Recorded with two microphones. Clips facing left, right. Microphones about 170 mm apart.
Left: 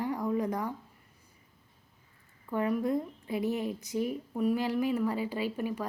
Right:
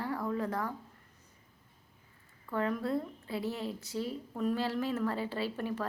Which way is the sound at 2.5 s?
15° left (ahead or behind).